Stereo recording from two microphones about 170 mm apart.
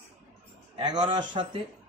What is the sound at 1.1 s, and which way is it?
Speech, 30° right (ahead or behind).